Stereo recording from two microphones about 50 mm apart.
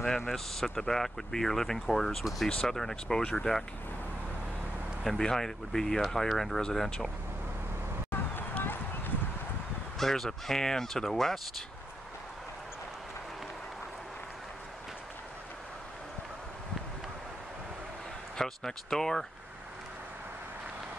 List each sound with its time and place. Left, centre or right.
0.3 s speech: centre
3.2 s speech: centre
5.0 s speech: centre
8.1 s run: left
9.9 s speech: centre
18.4 s speech: centre